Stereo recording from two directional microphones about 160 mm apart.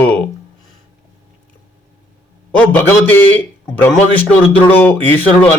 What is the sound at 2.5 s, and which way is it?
A man's voice, 10° left (ahead or behind).